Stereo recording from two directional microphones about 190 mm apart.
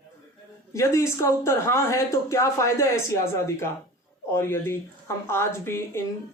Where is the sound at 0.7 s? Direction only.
15° left (ahead or behind).